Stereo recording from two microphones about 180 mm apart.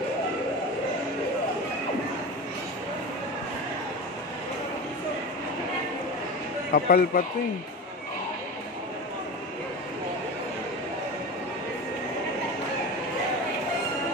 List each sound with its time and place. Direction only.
6.7 s speech: 55° left (ahead or behind)